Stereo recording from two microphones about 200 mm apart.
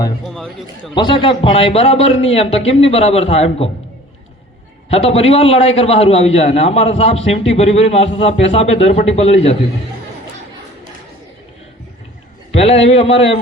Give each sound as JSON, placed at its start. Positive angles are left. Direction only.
{"t": 0.3, "sound": "a man's voice", "side_deg": 0}
{"t": 0.9, "sound": "a man's voice", "side_deg": 25}
{"t": 4.9, "sound": "a man's voice", "side_deg": 30}
{"t": 12.5, "sound": "a man's voice", "side_deg": 30}